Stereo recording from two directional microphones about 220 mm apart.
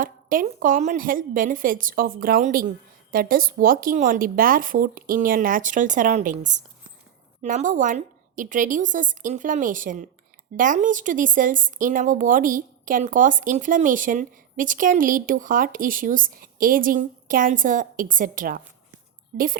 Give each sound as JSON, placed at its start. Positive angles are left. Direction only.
{"t": 0.0, "sound": "speech", "side_deg": -40}